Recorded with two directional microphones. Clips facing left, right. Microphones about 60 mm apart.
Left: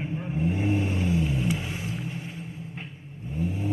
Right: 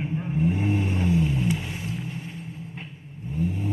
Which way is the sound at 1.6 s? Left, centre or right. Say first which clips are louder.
Even; left.